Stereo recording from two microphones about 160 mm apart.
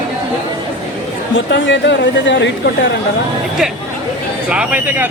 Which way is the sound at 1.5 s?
90° left.